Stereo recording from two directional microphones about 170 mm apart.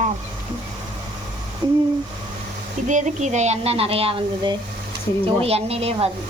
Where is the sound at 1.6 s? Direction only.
30° right (ahead or behind).